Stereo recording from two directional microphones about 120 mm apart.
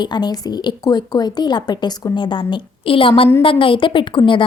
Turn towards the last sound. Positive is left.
turn(degrees=45)  # may be behind; listen again after turning